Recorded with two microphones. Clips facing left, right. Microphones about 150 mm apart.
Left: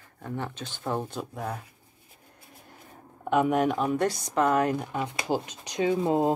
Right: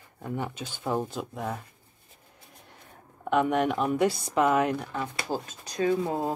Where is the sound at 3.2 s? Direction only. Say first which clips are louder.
Left 1 dB; centre (ahead or behind).